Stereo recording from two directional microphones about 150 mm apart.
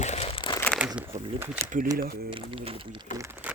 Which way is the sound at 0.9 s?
15° right (ahead or behind).